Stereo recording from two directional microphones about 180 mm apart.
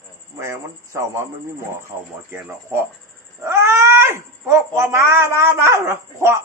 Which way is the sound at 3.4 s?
15° right (ahead or behind).